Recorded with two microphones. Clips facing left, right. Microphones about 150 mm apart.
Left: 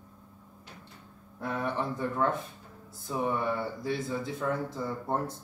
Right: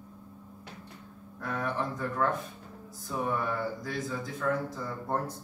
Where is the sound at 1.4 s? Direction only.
25° left (ahead or behind).